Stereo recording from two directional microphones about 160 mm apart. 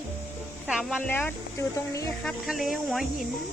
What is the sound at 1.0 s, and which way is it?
Speech, 10° left (ahead or behind).